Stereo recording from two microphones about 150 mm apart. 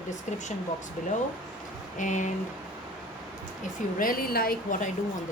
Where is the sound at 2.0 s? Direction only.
55° left (ahead or behind).